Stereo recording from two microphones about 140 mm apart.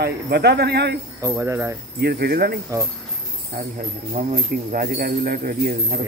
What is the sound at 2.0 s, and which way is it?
Speech, 90° right.